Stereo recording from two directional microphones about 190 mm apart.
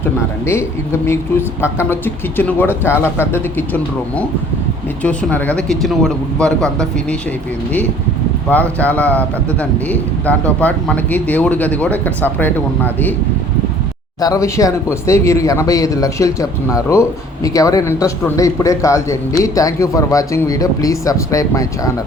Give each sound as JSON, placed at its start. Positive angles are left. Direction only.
{"t": 1.6, "sound": "a man's voice", "side_deg": 10}
{"t": 8.4, "sound": "a man's voice", "side_deg": 10}
{"t": 14.2, "sound": "a man's voice", "side_deg": 15}